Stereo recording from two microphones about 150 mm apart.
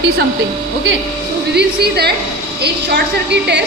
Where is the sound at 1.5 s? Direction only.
90° right.